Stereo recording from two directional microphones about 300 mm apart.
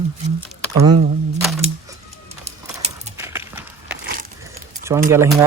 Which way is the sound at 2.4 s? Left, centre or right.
Right.